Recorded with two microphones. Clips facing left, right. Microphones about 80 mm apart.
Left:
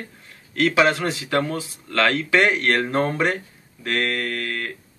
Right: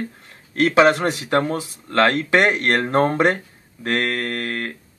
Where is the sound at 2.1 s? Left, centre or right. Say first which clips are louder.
Right 2 dB; right.